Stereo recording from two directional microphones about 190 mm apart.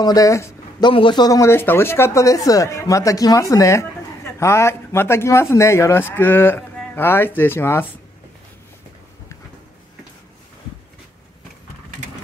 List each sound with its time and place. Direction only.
0.0 s speech: 20° left (ahead or behind)